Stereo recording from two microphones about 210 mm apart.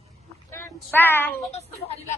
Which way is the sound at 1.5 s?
30° left (ahead or behind).